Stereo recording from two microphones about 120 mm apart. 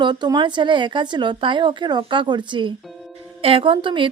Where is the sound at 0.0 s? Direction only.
40° right (ahead or behind).